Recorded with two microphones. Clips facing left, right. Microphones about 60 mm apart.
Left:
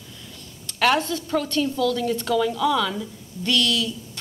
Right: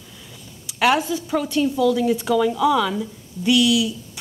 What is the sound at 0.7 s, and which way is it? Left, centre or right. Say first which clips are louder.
A woman's voice: right 2 dB; centre.